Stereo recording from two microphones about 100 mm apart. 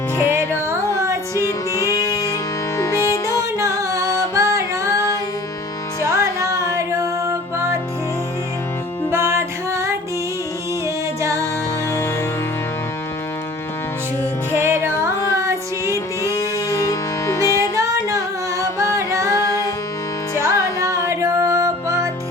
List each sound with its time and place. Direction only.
0.3 s music: 25° right (ahead or behind)
1.5 s music: 30° left (ahead or behind)
3.6 s music: 30° right (ahead or behind)
6.1 s music: 30° right (ahead or behind)
9.0 s music: 30° right (ahead or behind)
11.2 s music: 30° right (ahead or behind)
14.5 s music: 25° right (ahead or behind)
16.3 s music: 35° left (ahead or behind)
17.7 s singing: 30° right (ahead or behind)
18.9 s music: 30° right (ahead or behind)
20.4 s music: 35° right (ahead or behind)